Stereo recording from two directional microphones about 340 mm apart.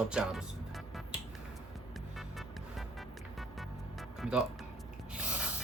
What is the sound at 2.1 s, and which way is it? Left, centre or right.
Music, centre.